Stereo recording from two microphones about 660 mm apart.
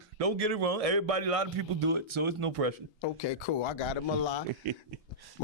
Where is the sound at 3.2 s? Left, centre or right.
Left.